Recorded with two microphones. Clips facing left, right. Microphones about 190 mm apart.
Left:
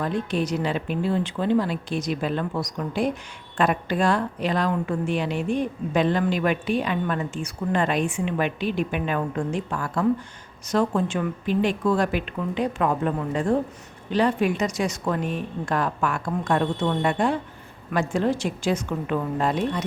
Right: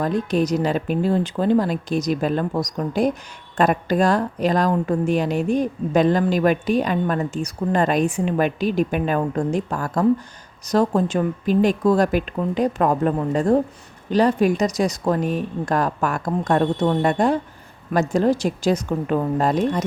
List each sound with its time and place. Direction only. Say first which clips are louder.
0.0 s a woman's voice: right 5 dB; 40° right (ahead or behind)